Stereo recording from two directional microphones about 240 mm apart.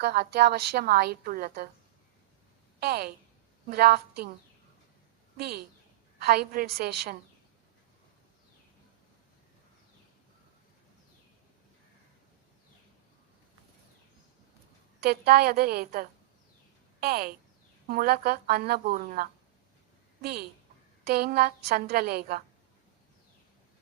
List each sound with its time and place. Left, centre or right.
0.0 s a woman's voice: right
2.8 s a woman's voice: right
6.1 s a woman's voice: right
15.0 s a woman's voice: right
21.0 s a woman's voice: right